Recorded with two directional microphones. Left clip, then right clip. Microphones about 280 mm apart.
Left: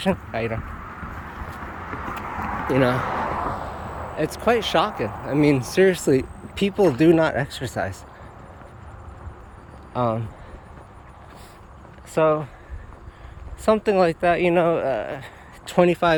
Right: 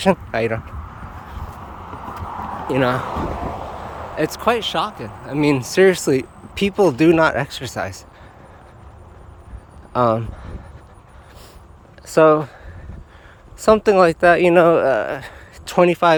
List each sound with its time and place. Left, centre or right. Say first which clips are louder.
0.0 s speech: right 7 dB; centre
2.0 s clip-clop: right 1 dB; right
2.6 s speech: right 2 dB; centre
3.1 s vehicle: left 1 dB; right
4.2 s speech: right 2 dB; centre
9.9 s speech: right 7 dB; centre
12.0 s speech: right 7 dB; centre
13.7 s speech: right 6 dB; centre